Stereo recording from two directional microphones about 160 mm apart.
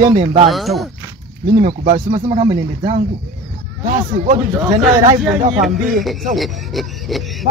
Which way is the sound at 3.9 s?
50° right (ahead or behind).